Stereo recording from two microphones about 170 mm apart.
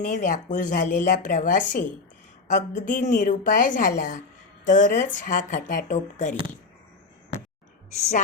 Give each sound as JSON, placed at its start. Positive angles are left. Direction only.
{"t": 0.0, "sound": "speech", "side_deg": 45}